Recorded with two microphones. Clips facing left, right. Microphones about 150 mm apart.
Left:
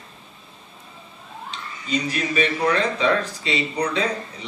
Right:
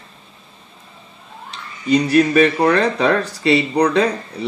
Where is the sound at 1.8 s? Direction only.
65° right (ahead or behind).